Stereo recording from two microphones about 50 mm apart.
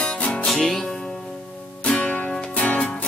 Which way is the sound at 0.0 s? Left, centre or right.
Left.